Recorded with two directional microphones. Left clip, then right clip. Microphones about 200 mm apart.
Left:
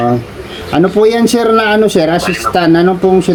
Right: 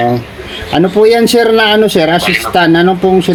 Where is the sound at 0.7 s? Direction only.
5° left (ahead or behind).